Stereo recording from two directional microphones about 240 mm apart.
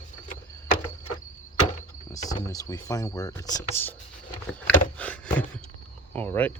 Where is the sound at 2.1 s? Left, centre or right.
Centre.